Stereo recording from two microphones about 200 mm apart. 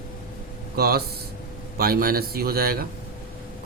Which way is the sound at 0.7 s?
50° right (ahead or behind).